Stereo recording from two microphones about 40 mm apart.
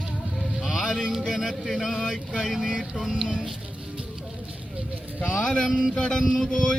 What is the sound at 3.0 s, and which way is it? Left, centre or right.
Speech, centre.